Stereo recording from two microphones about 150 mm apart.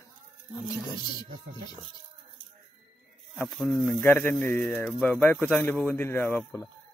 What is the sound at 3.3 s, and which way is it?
Speech, centre (ahead or behind).